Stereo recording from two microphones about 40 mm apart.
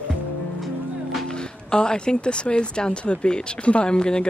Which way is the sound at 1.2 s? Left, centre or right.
Left.